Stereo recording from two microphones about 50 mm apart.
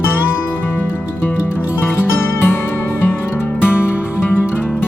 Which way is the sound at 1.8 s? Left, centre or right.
Left.